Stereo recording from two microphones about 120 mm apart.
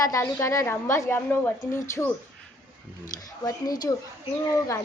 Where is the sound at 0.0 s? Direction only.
25° left (ahead or behind).